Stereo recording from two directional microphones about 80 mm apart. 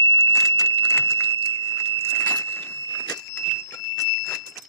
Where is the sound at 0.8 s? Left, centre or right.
Left.